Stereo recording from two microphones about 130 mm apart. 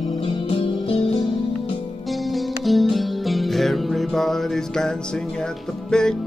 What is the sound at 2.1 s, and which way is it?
Music, centre (ahead or behind).